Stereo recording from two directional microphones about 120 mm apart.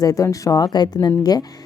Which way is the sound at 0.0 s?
30° left (ahead or behind).